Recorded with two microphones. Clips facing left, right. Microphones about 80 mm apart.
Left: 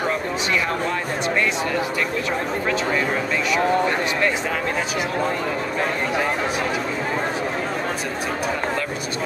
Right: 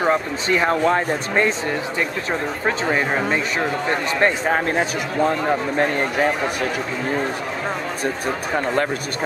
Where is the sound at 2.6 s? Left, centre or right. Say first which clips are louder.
Right 3 dB; right.